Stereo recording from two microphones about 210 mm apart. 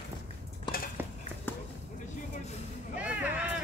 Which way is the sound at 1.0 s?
10° right (ahead or behind).